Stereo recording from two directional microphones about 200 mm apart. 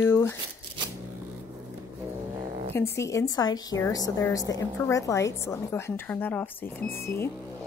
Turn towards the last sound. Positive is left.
turn(degrees=10)  # may be behind; listen again after turning